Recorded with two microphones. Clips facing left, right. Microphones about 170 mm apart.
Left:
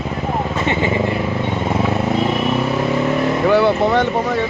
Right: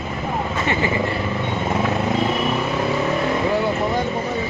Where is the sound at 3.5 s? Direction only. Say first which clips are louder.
Left 6 dB; 80° left.